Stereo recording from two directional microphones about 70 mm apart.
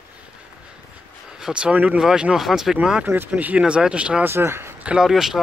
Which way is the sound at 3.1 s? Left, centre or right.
Right.